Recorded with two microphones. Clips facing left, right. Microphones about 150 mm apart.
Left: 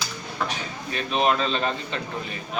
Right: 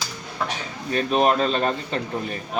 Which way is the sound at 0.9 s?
45° right (ahead or behind).